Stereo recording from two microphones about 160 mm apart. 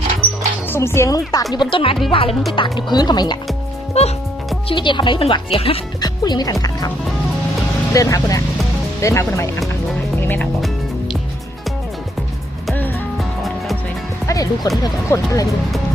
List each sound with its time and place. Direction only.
0.7 s speech: 15° left (ahead or behind)
1.5 s speech: 35° left (ahead or behind)
3.9 s speech: 40° left (ahead or behind)
4.7 s speech: 30° left (ahead or behind)
6.0 s speech: 25° left (ahead or behind)
7.9 s speech: 20° left (ahead or behind)
10.2 s music: 10° left (ahead or behind)
14.3 s speech: 20° left (ahead or behind)